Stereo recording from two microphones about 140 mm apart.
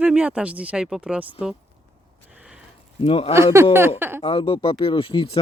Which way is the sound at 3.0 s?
45° left (ahead or behind).